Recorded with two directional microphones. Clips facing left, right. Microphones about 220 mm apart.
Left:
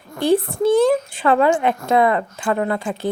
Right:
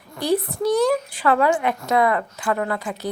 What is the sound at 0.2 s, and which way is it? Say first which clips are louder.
A woman's voice: left 4 dB; 25° left (ahead or behind).